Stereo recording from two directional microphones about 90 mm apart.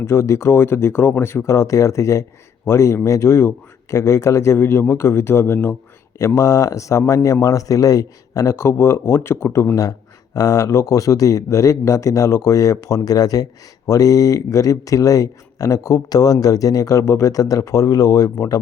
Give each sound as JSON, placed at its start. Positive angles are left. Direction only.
{"t": 0.0, "sound": "speech", "side_deg": 30}
{"t": 6.1, "sound": "speech", "side_deg": 35}